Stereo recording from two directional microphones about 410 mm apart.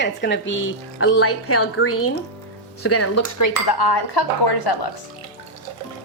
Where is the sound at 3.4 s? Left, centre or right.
Left.